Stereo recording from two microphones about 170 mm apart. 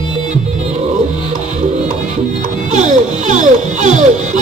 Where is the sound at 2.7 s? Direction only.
45° right (ahead or behind).